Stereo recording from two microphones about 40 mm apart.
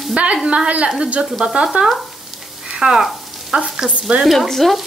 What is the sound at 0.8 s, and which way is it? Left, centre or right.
Stir, centre.